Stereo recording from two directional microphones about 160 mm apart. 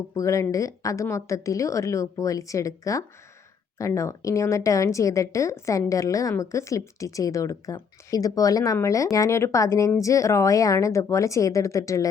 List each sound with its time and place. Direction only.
0.2 s a woman's voice: 20° left (ahead or behind)